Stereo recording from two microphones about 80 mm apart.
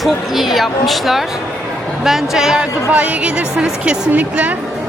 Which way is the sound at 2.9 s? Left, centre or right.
Centre.